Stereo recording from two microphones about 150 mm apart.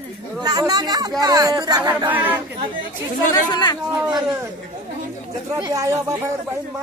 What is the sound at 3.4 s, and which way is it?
Speech, 30° left (ahead or behind).